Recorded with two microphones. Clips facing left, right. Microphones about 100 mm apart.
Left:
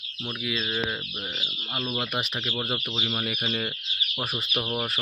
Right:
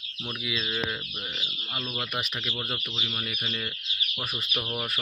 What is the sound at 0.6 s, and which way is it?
Speech, 25° left (ahead or behind).